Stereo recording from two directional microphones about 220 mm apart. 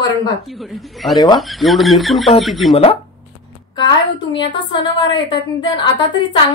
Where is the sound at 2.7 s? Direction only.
25° left (ahead or behind).